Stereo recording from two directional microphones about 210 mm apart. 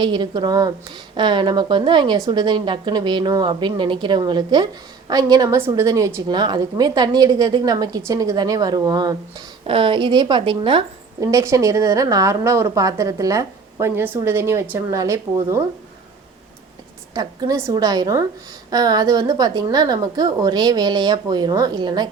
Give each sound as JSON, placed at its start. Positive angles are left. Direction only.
{"t": 0.0, "sound": "a woman's voice", "side_deg": -20}
{"t": 17.2, "sound": "a woman's voice", "side_deg": -20}